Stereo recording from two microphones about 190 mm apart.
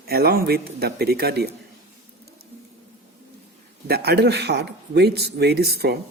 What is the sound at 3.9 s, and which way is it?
Speech, 60° right (ahead or behind).